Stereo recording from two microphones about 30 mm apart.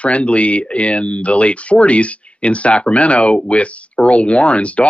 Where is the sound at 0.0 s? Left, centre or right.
Left.